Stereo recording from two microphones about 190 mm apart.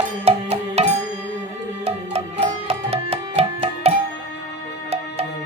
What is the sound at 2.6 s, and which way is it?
Music, 30° right (ahead or behind).